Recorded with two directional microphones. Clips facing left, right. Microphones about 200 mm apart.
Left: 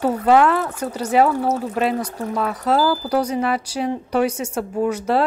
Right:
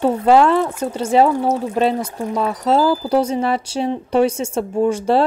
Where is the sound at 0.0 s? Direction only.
25° right (ahead or behind).